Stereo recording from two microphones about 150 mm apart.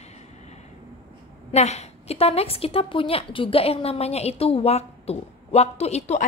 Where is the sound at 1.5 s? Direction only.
45° left (ahead or behind).